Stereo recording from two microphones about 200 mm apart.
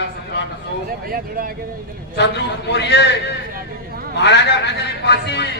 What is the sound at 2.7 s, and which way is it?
Speech, 60° left (ahead or behind).